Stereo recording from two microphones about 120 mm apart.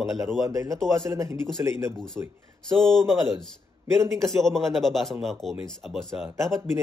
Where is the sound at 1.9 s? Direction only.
5° left (ahead or behind).